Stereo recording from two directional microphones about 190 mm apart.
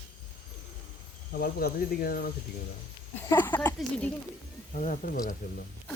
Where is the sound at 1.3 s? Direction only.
55° left (ahead or behind).